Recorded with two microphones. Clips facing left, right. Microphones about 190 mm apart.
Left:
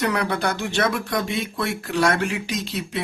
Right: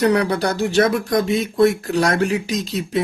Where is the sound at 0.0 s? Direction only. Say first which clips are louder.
Right 6 dB; 35° right (ahead or behind).